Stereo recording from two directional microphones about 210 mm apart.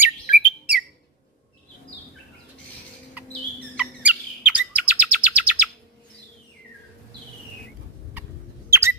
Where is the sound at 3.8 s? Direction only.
5° right (ahead or behind).